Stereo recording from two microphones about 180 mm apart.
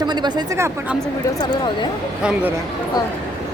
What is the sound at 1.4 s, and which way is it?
Speech, 25° left (ahead or behind).